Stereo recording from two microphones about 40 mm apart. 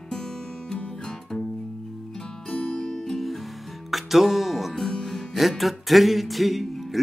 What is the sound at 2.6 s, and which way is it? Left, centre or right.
Music, left.